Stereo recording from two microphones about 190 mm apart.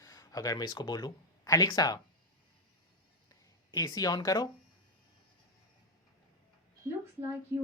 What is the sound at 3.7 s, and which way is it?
Speech, 20° left (ahead or behind).